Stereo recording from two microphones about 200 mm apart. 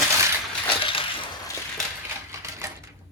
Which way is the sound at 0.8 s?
25° left (ahead or behind).